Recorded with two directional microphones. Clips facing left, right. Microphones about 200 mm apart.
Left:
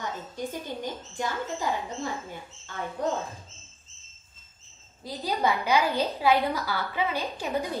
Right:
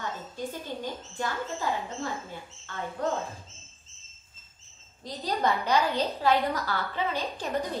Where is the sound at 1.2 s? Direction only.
15° left (ahead or behind).